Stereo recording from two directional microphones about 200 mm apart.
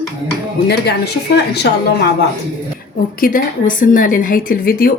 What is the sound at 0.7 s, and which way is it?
Speech, 55° left (ahead or behind).